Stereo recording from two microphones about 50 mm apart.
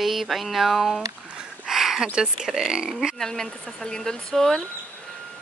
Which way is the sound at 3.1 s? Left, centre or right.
Centre.